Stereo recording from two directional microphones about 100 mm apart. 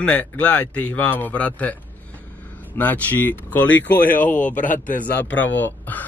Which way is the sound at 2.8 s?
20° left (ahead or behind).